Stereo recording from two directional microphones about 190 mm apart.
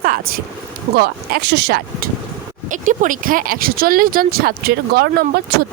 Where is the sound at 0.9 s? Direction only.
55° right (ahead or behind).